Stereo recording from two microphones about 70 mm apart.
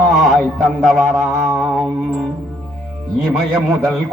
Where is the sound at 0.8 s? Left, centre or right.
Centre.